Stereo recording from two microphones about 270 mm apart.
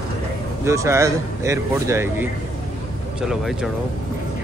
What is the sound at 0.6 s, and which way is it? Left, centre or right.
Speech, centre.